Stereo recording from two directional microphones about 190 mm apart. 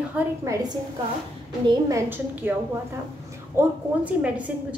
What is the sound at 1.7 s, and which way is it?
Speech, 15° right (ahead or behind).